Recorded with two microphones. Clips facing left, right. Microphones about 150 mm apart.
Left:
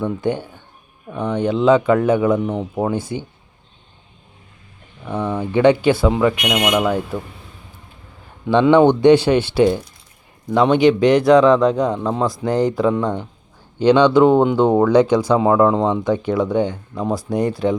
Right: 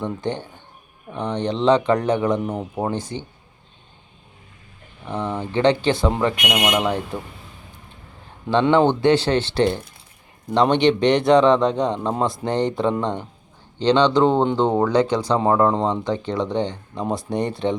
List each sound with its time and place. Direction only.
0.0 s speech: 10° left (ahead or behind)
2.4 s a man's voice: centre (ahead or behind)
2.9 s speech: 10° left (ahead or behind)
5.1 s speech: 10° left (ahead or behind)
6.5 s speech: 10° right (ahead or behind)
6.7 s a man's voice: 5° left (ahead or behind)
8.4 s a man's voice: 15° left (ahead or behind)